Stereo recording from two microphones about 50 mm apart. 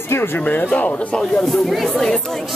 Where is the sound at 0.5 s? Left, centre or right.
Left.